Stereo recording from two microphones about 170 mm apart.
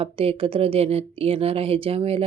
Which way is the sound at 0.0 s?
35° right (ahead or behind).